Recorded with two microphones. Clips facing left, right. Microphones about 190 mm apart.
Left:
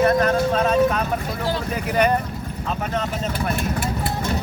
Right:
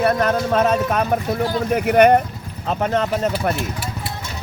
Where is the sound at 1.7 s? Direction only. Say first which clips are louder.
Right 8 dB; 65° right (ahead or behind).